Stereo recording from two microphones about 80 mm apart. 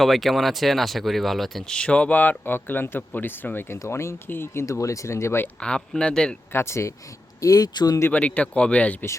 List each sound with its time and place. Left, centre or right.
0.0 s speech: centre; by 5.5 s left
5.5 s speech: centre
6.5 s speech: left
7.4 s speech: left
8.1 s speech: centre